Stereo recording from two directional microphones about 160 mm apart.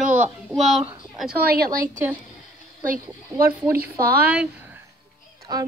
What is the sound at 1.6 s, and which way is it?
Speech, 60° right (ahead or behind).